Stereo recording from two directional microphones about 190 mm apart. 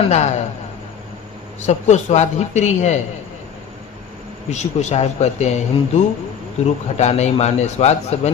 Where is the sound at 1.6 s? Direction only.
35° left (ahead or behind).